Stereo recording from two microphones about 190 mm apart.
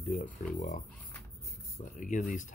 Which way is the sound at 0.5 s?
40° left (ahead or behind).